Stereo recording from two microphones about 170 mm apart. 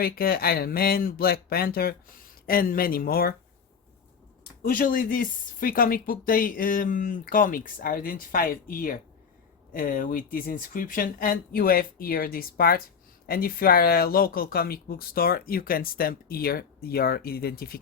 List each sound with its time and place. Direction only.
0.0 s speech: 65° left (ahead or behind)
4.6 s speech: 55° left (ahead or behind)